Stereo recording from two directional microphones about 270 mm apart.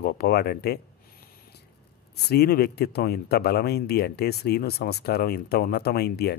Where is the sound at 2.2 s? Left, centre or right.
Left.